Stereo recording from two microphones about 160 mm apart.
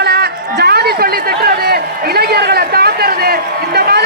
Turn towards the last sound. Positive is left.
turn(degrees=-80)